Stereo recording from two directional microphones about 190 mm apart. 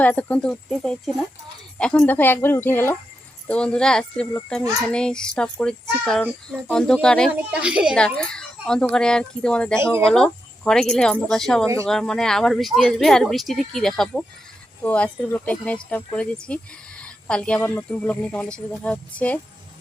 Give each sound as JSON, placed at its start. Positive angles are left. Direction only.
{"t": 0.0, "sound": "speech", "side_deg": 10}
{"t": 7.9, "sound": "speech", "side_deg": 5}
{"t": 9.7, "sound": "speech", "side_deg": -15}
{"t": 10.1, "sound": "speech", "side_deg": 5}